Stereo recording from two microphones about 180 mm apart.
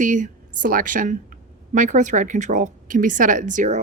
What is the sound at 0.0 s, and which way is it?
A woman's voice, 45° right (ahead or behind).